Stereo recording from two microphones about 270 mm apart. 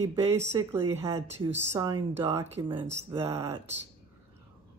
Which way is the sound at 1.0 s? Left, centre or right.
Right.